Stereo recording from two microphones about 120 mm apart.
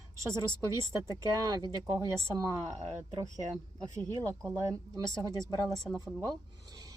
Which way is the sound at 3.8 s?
30° right (ahead or behind).